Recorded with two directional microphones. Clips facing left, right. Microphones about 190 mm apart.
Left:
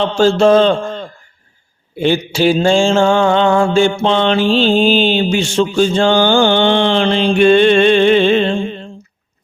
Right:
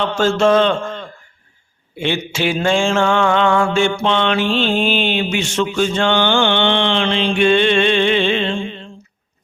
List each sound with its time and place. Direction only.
0.0 s mantra: 30° left (ahead or behind)